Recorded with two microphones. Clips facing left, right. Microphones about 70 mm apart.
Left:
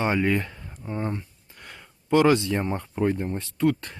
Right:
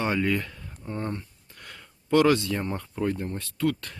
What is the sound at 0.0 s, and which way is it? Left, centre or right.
Speech, left.